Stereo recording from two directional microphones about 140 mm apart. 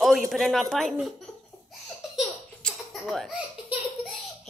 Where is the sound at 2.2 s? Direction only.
Centre (ahead or behind).